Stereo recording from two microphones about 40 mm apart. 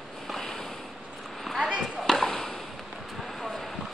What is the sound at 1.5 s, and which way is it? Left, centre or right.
Basketball bounce, centre.